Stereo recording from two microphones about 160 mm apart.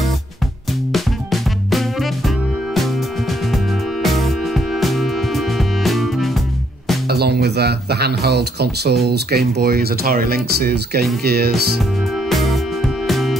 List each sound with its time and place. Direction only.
0.9 s music: centre (ahead or behind)
7.1 s speech: 85° right
12.3 s music: centre (ahead or behind)